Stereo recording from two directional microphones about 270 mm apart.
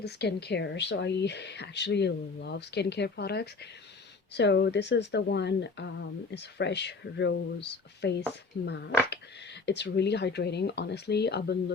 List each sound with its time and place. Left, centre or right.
0.0 s speech: left